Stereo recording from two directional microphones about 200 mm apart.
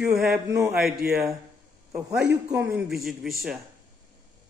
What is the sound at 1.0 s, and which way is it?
Speech, 45° right (ahead or behind).